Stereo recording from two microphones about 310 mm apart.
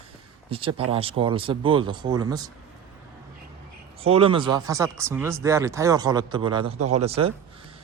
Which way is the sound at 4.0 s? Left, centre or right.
Centre.